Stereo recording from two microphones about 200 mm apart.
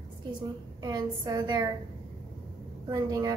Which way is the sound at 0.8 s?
20° right (ahead or behind).